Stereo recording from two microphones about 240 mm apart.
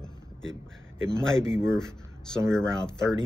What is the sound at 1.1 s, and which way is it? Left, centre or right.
Speech, centre.